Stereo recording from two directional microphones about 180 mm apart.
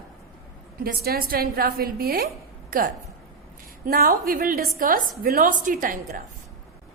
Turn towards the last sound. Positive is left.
turn(degrees=-50)  # may be behind; listen again after turning